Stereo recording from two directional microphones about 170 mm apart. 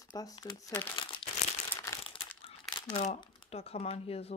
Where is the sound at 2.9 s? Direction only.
40° left (ahead or behind).